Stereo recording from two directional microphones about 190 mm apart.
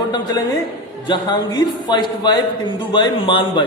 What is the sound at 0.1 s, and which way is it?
A man's voice, 20° left (ahead or behind).